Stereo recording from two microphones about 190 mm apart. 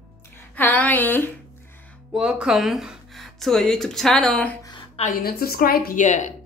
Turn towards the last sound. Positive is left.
turn(degrees=40)  # may be behind; listen again after turning